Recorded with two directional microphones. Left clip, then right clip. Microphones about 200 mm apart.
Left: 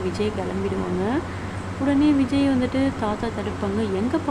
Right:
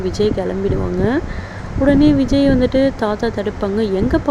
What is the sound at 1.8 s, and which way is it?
Speech, 25° right (ahead or behind).